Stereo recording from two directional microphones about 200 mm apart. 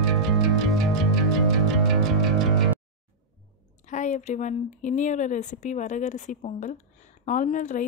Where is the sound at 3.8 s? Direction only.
35° left (ahead or behind).